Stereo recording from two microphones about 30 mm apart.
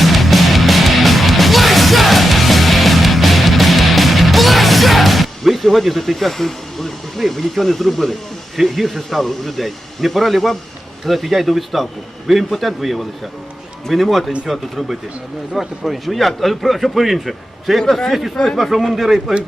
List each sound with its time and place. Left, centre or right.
0.0 s music: centre
7.2 s a man's voice: centre
18.4 s speech: centre
18.9 s a man's voice: centre